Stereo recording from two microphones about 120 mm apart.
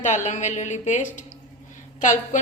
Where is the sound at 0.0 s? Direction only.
85° left.